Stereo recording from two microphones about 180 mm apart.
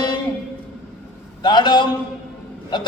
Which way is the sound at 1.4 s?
25° left (ahead or behind).